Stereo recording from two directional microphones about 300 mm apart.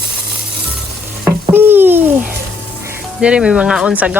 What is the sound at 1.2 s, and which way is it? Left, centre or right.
Stir, centre.